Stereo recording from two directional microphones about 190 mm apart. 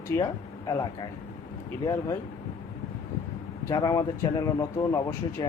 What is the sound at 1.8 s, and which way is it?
Speech, 20° left (ahead or behind).